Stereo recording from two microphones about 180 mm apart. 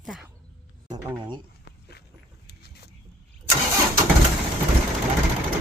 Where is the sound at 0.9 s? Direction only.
20° right (ahead or behind).